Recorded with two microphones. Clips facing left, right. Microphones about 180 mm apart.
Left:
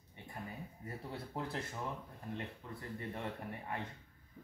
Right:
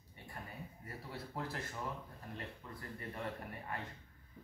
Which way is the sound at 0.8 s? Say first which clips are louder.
Left 3 dB; 25° left (ahead or behind).